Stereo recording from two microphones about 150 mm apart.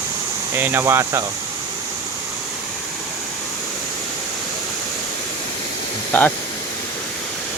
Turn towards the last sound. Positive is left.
turn(degrees=10)  # may be behind; listen again after turning